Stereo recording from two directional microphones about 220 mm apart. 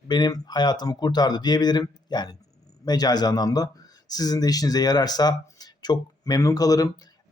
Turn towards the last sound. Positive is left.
turn(degrees=15)  # may be behind; listen again after turning